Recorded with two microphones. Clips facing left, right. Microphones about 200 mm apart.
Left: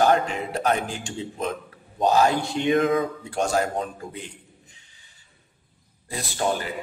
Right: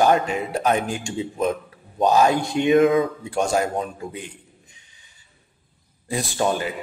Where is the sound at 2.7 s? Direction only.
25° right (ahead or behind).